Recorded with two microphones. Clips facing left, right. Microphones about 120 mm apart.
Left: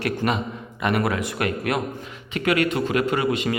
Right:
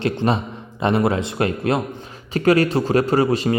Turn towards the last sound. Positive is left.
turn(degrees=-35)  # may be behind; listen again after turning